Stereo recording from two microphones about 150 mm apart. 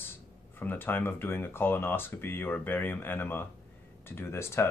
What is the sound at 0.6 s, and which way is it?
Speech, 15° left (ahead or behind).